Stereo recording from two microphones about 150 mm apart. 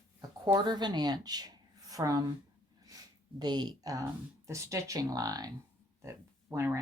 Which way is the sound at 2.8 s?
25° right (ahead or behind).